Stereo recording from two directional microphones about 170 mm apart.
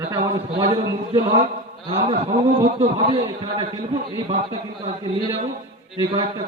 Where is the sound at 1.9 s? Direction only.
35° right (ahead or behind).